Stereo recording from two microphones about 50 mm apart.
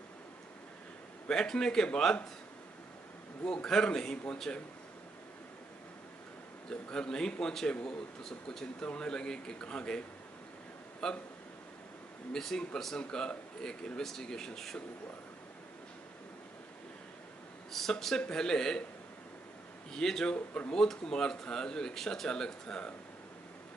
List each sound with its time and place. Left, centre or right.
1.2 s speech: centre
3.4 s speech: centre
6.7 s speech: centre
12.3 s speech: centre
17.7 s speech: centre
19.9 s speech: centre
20.3 s speech: left
20.7 s speech: centre